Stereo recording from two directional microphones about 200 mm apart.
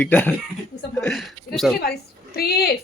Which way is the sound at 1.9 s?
50° left (ahead or behind).